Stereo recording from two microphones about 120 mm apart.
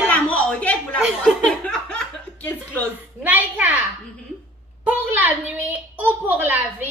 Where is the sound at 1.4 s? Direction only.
10° left (ahead or behind).